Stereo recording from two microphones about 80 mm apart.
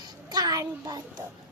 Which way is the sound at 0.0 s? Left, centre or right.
Right.